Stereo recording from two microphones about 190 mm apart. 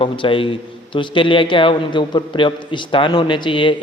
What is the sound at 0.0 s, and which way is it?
A man's voice, 25° left (ahead or behind).